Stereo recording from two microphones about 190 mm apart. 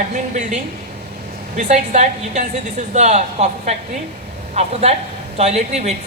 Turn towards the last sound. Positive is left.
turn(degrees=-35)  # may be behind; listen again after turning